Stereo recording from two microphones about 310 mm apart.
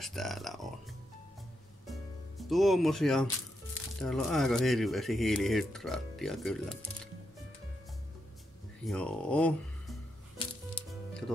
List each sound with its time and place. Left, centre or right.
0.0 s speech: centre
1.9 s music: centre
4.0 s speech: centre
8.8 s speech: centre
10.7 s music: centre